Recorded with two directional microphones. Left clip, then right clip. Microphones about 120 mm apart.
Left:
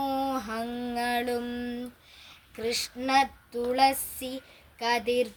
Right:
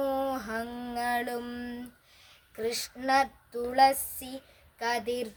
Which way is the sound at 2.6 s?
40° right (ahead or behind).